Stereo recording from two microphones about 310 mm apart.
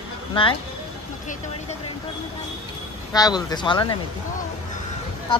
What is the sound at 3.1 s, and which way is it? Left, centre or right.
Speech, centre.